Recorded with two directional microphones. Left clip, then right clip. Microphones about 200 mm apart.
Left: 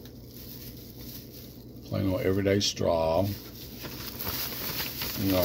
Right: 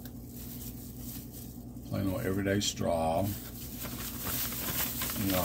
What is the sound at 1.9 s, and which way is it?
Speech, 35° left (ahead or behind).